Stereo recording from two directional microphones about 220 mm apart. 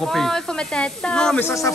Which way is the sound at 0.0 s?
Centre (ahead or behind).